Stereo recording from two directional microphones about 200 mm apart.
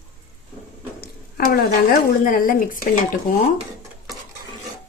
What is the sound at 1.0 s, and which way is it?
Speech, 45° left (ahead or behind).